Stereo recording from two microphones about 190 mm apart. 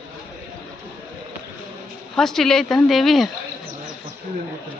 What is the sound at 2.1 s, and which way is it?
Speech, centre (ahead or behind).